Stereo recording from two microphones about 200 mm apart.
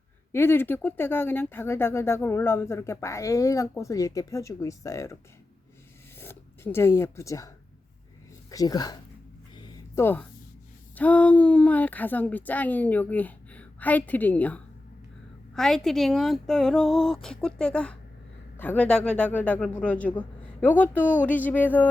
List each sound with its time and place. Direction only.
0.3 s speech: 10° left (ahead or behind)
6.1 s speech: 10° left (ahead or behind)
9.6 s a sound: 15° left (ahead or behind)
10.9 s speech: 5° left (ahead or behind)